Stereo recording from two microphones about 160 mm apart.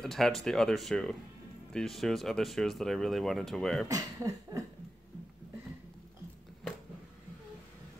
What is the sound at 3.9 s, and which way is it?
Speech, 20° right (ahead or behind).